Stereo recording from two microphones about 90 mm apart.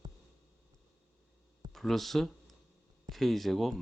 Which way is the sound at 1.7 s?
Centre (ahead or behind).